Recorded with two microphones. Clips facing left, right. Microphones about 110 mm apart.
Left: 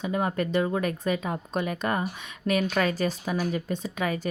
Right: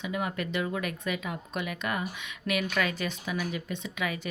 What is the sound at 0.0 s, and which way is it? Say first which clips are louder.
Speech: left 5 dB; 35° left (ahead or behind).